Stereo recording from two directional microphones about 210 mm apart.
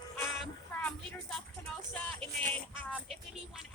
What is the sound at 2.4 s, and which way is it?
Music, 10° left (ahead or behind).